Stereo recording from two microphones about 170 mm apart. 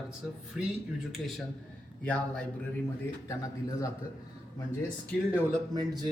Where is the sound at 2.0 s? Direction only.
5° left (ahead or behind).